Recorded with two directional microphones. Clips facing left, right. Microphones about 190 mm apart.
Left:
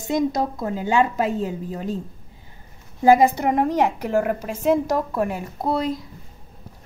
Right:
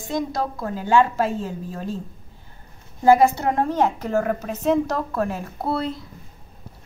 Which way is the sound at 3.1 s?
15° left (ahead or behind).